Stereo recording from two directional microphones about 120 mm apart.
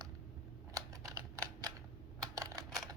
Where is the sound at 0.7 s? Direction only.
30° right (ahead or behind).